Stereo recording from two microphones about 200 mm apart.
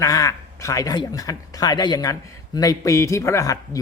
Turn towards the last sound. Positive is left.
turn(degrees=15)  # may be behind; listen again after turning